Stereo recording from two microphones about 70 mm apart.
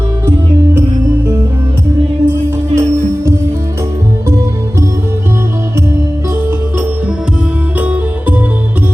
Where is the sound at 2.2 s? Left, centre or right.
Right.